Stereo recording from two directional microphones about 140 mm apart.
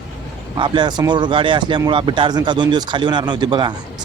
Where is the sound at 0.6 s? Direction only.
35° right (ahead or behind).